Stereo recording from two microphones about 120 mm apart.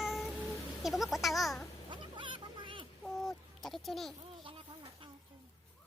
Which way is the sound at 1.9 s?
40° right (ahead or behind).